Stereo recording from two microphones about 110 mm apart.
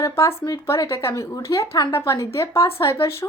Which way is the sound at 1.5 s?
40° left (ahead or behind).